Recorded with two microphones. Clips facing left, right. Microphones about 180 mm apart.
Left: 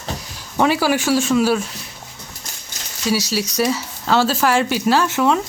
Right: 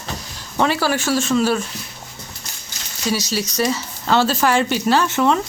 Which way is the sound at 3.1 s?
5° left (ahead or behind).